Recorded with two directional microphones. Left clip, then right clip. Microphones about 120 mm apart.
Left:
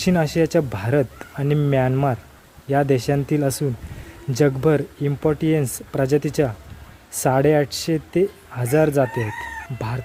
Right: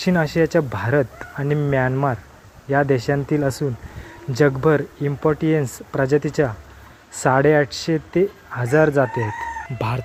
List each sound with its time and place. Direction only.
0.0 s speech: 30° left (ahead or behind)
1.5 s speech: 45° left (ahead or behind)
2.6 s speech: 30° left (ahead or behind)
9.7 s chicken: 20° right (ahead or behind)